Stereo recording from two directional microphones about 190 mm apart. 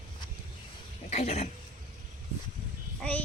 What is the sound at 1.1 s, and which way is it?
Speech, 35° left (ahead or behind).